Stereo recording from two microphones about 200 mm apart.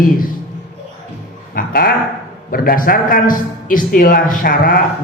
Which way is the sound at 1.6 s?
50° left (ahead or behind).